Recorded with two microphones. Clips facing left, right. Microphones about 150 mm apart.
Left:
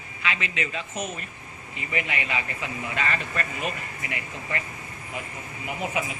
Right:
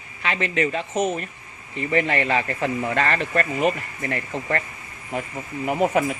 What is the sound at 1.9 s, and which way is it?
A man's voice, 35° right (ahead or behind).